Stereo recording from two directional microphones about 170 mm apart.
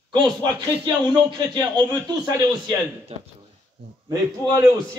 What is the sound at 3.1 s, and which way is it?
Speech, 40° right (ahead or behind).